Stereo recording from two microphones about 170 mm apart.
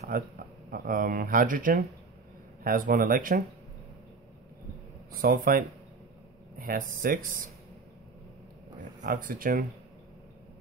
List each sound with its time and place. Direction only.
0.1 s speech: 60° right (ahead or behind)
5.2 s speech: 55° right (ahead or behind)
9.0 s speech: 55° right (ahead or behind)